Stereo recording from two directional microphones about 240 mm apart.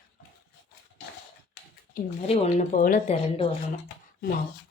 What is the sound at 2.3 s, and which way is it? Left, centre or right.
Speech, left.